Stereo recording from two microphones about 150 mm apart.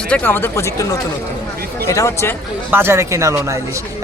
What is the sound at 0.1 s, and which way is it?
Speech, 15° left (ahead or behind).